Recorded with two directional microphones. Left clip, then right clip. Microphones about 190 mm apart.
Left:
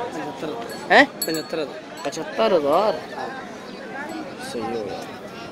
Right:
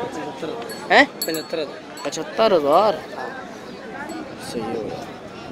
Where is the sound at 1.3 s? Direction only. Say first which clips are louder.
Right 1 dB; 50° left (ahead or behind).